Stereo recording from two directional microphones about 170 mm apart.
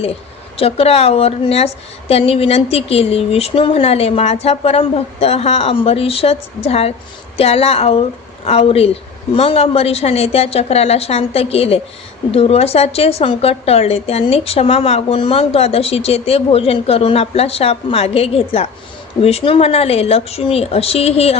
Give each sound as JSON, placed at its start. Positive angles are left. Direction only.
{"t": 0.5, "sound": "a woman's voice", "side_deg": 35}